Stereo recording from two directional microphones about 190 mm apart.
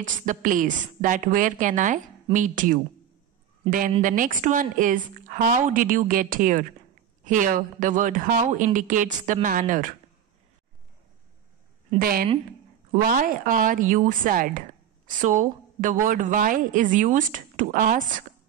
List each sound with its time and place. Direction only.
0.0 s a woman's voice: 45° right (ahead or behind)
4.0 s a woman's voice: 45° right (ahead or behind)
12.0 s a woman's voice: 50° right (ahead or behind)